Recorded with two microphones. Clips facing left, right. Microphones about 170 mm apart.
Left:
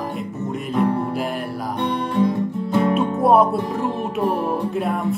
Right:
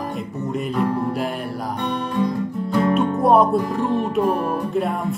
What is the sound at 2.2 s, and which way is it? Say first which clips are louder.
Music: left 3 dB; 20° left (ahead or behind).